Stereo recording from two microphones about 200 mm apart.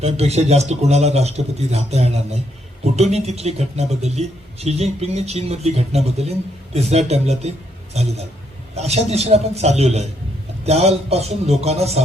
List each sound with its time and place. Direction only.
0.0 s speech: 30° right (ahead or behind)